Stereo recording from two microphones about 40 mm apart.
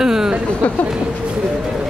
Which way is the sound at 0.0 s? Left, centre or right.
Centre.